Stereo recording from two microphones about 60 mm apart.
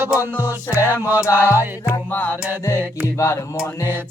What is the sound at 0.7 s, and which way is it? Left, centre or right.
Music, left.